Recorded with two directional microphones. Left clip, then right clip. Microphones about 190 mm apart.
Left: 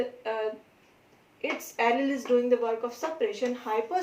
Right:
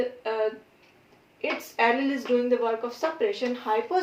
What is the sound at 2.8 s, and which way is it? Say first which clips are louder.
Speech: right 3 dB; 15° right (ahead or behind).